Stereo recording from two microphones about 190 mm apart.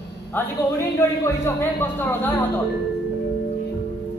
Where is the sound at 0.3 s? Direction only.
15° left (ahead or behind).